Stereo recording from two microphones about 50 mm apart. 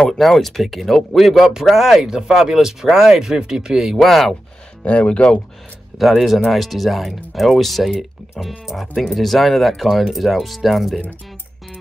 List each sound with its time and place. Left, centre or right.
0.2 s speech: centre
4.0 s speech: centre
4.8 s speech: left
5.9 s speech: centre